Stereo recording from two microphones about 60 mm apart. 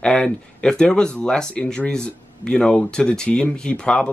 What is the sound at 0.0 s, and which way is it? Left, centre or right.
Speech, centre.